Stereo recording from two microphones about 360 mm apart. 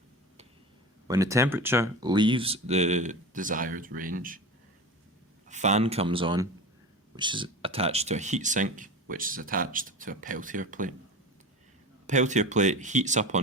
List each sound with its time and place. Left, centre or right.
1.0 s speech: centre
5.5 s speech: centre
12.0 s speech: centre